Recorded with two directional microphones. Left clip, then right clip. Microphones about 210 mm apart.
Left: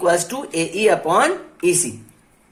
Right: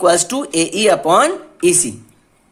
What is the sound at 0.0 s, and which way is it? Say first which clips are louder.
Speech: right 4 dB; 50° right (ahead or behind).